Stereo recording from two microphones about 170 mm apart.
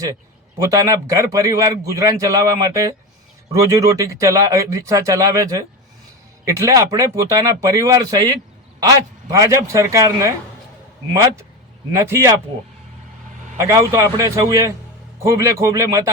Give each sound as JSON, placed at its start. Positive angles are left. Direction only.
{"t": 0.6, "sound": "a man's voice", "side_deg": -20}
{"t": 11.9, "sound": "a man's voice", "side_deg": -15}
{"t": 13.6, "sound": "a man's voice", "side_deg": -20}